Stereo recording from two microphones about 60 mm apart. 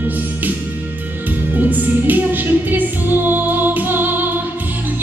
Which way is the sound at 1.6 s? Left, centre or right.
Right.